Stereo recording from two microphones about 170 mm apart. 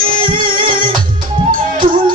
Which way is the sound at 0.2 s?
55° right (ahead or behind).